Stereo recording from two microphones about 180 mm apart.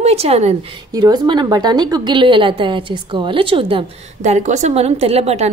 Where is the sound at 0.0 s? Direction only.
35° right (ahead or behind).